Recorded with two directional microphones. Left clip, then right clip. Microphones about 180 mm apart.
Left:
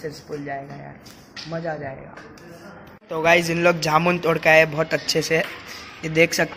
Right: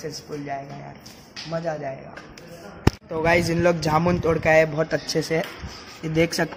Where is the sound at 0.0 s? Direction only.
5° right (ahead or behind).